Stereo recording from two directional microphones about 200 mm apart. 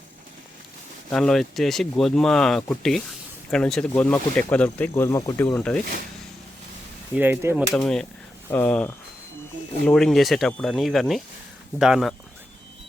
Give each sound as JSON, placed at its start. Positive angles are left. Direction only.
{"t": 1.1, "sound": "speech", "side_deg": 5}
{"t": 7.2, "sound": "speech", "side_deg": -10}
{"t": 7.7, "sound": "speech", "side_deg": 5}